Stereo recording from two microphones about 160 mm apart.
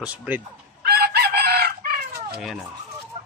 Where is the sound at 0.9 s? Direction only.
80° right.